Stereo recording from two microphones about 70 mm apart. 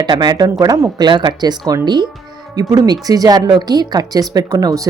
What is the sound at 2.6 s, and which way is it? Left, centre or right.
Speech, right.